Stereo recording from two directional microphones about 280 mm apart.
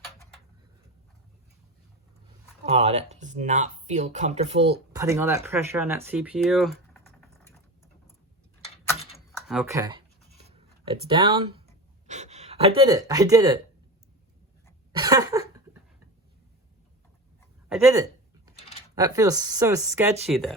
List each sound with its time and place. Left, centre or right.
2.6 s speech: right
4.9 s speech: centre
9.5 s writing: centre
12.0 s speech: right
14.9 s a sound: centre
17.7 s a sound: centre
18.9 s speech: centre